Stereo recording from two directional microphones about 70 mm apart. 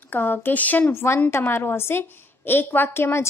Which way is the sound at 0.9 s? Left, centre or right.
Left.